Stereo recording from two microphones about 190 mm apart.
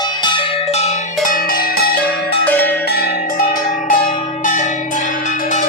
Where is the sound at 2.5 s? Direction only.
10° left (ahead or behind).